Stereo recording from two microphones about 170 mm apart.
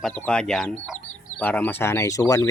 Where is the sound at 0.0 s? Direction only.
5° left (ahead or behind).